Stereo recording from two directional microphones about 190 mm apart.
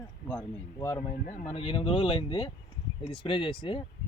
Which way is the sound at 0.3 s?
15° left (ahead or behind).